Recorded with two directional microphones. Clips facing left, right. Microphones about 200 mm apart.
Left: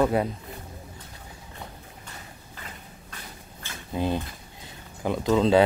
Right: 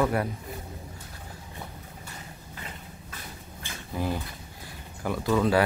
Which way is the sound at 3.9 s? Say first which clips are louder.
Left 4 dB; 20° left (ahead or behind).